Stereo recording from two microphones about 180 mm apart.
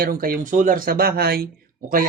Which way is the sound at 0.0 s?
55° right (ahead or behind).